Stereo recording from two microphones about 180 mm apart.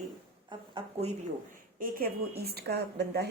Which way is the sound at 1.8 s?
55° right (ahead or behind).